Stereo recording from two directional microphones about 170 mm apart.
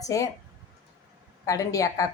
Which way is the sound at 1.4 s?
20° left (ahead or behind).